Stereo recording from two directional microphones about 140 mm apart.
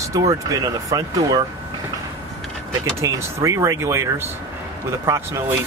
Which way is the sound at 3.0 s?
20° right (ahead or behind).